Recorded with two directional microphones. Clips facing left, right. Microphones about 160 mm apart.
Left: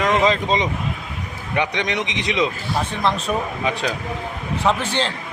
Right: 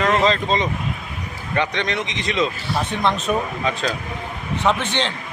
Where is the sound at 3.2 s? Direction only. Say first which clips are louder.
Right 1 dB; 15° left (ahead or behind).